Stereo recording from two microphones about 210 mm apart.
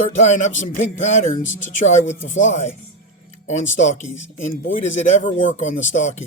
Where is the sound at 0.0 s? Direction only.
35° left (ahead or behind).